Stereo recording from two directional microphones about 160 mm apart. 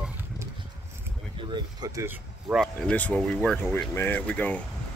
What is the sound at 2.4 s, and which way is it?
Speech, centre (ahead or behind).